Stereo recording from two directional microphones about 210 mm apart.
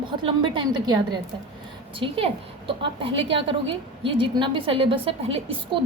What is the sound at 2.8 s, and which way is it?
A woman's voice, 25° right (ahead or behind).